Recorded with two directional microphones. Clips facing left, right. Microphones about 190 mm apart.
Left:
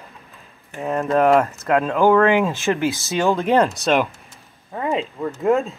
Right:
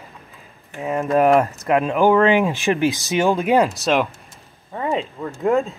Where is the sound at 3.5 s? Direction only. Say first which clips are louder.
Even; centre (ahead or behind).